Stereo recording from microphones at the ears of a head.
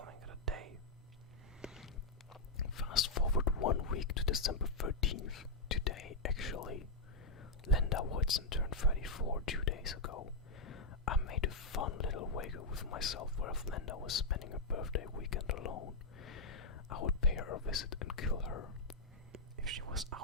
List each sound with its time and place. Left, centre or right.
0.0 s whispering: right
2.6 s whispering: left
19.3 s whispering: right